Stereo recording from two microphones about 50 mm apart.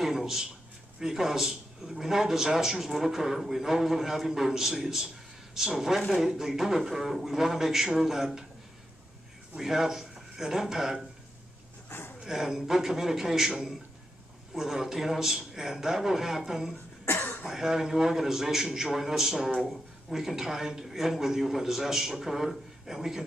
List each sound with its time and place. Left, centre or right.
0.0 s a sound: centre
0.9 s a man's voice: centre
9.6 s speech: centre
12.2 s a man's voice: centre
17.0 s cough: left
17.5 s a man's voice: centre